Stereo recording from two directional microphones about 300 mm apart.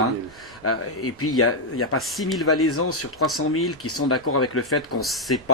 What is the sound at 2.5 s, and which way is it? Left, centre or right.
Speech, left.